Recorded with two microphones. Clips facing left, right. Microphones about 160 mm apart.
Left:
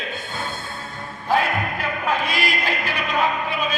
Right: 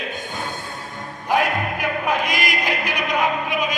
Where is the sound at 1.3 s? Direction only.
15° right (ahead or behind).